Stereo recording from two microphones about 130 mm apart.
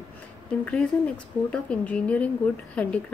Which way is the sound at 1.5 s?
10° left (ahead or behind).